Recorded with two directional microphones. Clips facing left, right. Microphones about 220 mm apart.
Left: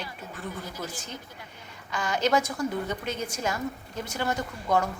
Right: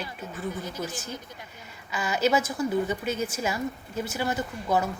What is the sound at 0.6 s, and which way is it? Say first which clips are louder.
Speech: right 3 dB; 20° right (ahead or behind).